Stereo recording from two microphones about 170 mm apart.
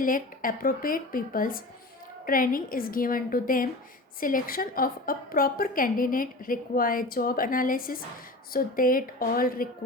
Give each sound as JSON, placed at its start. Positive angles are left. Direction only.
{"t": 0.0, "sound": "a woman's voice", "side_deg": 55}